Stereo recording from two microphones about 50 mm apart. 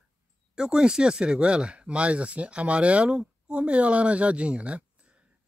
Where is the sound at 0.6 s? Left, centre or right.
Centre.